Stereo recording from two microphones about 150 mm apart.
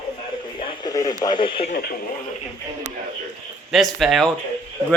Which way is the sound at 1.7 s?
85° left.